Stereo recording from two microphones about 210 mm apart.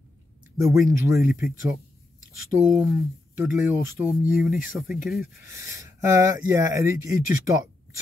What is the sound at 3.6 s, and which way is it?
Speech, 10° right (ahead or behind).